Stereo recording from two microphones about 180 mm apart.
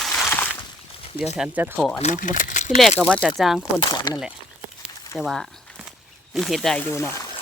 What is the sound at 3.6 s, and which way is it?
Speech, 20° left (ahead or behind).